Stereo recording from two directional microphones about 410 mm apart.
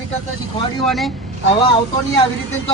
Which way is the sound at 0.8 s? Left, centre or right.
Centre.